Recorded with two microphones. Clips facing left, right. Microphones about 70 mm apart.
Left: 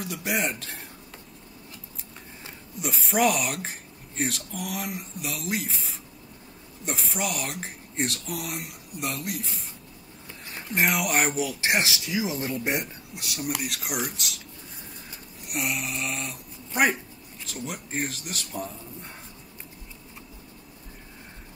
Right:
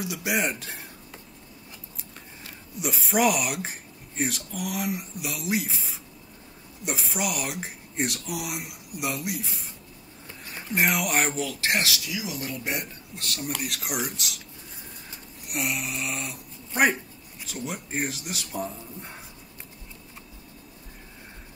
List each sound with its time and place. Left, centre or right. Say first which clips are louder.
0.0 s speech: right 1 dB; centre
2.8 s speech: even; centre
6.8 s speech: right 1 dB; centre; by 12.8 s left
13.1 s speech: left 1 dB; centre
15.4 s speech: even; centre
17.9 s speech: right 1 dB; centre
18.2 s speech: right 2 dB; centre